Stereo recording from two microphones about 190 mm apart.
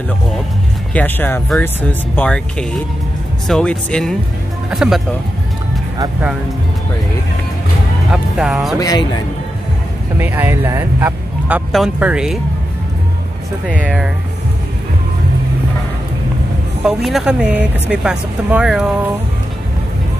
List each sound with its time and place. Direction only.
0.9 s speech: 10° left (ahead or behind)
8.1 s speech: centre (ahead or behind)
8.7 s a man's voice: 20° left (ahead or behind)
10.1 s speech: 10° right (ahead or behind)
13.8 s speech: centre (ahead or behind)
16.8 s speech: centre (ahead or behind)